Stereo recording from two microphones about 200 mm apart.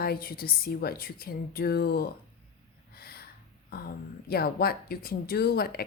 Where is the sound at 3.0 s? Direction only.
50° left (ahead or behind).